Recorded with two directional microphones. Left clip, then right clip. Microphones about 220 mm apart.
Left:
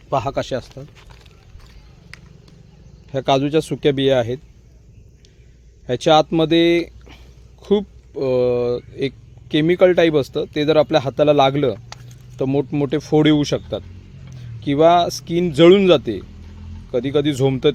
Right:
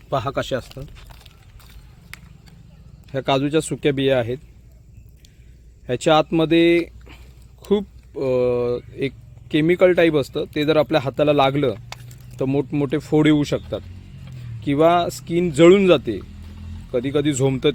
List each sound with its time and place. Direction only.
0.1 s speech: 5° left (ahead or behind)
3.1 s speech: 10° left (ahead or behind)
5.8 s speech: 10° left (ahead or behind)
11.9 s a sound: 20° right (ahead or behind)
12.4 s speech: 10° left (ahead or behind)
14.6 s speech: 10° left (ahead or behind)